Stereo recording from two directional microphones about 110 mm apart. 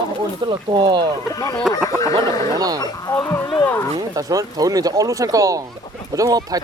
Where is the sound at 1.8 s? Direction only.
30° left (ahead or behind).